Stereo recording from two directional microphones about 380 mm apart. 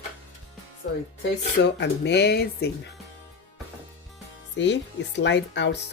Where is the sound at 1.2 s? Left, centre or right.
Left.